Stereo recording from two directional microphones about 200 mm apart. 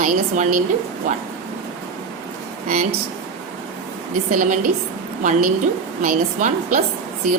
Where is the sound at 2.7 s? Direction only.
45° right (ahead or behind).